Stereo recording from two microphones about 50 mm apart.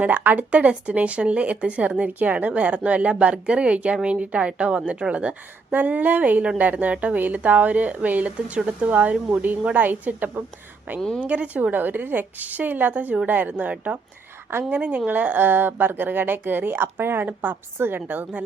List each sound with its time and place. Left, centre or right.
0.0 s speech: right
0.5 s speech: right
5.7 s speech: right